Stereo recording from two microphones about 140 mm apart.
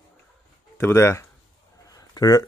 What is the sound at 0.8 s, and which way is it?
Speech, 20° left (ahead or behind).